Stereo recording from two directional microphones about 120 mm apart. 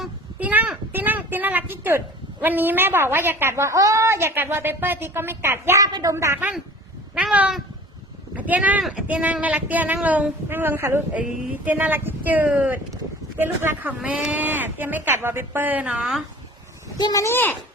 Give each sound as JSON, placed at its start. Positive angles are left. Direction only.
{"t": 0.3, "sound": "a sound", "side_deg": -15}
{"t": 2.4, "sound": "a woman's voice", "side_deg": -15}
{"t": 7.2, "sound": "a woman's voice", "side_deg": -10}
{"t": 17.0, "sound": "speech", "side_deg": 30}